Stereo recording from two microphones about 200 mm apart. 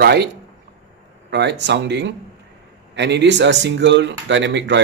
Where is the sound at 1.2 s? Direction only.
60° right (ahead or behind).